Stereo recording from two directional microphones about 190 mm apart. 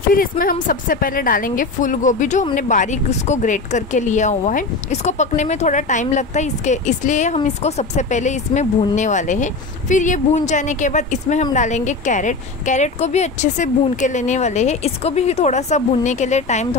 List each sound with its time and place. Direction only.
0.1 s speech: 50° left (ahead or behind)